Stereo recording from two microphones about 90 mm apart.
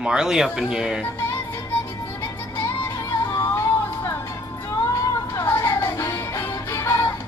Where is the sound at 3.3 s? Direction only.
30° left (ahead or behind).